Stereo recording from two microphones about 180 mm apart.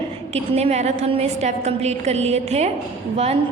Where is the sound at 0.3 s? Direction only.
35° right (ahead or behind).